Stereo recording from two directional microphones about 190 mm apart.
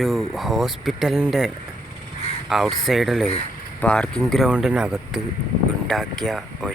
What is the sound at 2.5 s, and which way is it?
Speech, centre (ahead or behind).